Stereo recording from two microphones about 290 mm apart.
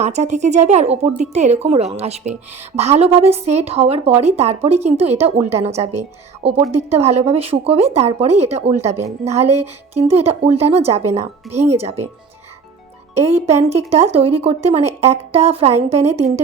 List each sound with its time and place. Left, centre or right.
0.0 s a woman's voice: right
11.5 s speech: centre
13.3 s a woman's voice: right